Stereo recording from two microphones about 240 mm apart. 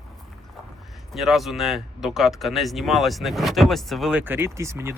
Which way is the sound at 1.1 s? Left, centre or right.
Centre.